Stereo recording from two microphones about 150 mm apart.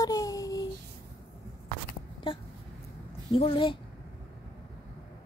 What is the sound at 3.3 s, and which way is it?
Speech, 35° left (ahead or behind).